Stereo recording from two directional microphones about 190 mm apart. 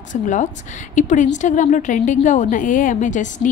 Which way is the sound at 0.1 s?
40° left (ahead or behind).